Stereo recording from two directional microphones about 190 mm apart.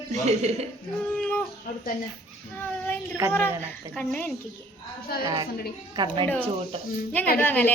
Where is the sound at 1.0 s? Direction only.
10° left (ahead or behind).